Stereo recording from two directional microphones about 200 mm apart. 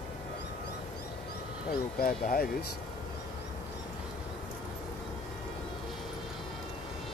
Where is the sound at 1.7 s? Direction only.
45° left (ahead or behind).